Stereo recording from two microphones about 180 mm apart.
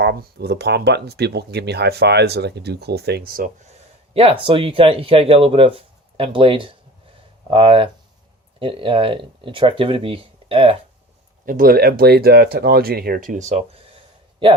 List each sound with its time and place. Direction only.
0.0 s speech: 65° right (ahead or behind)
4.1 s speech: 30° right (ahead or behind)
11.4 s speech: 50° right (ahead or behind); by 14.5 s 30° right (ahead or behind)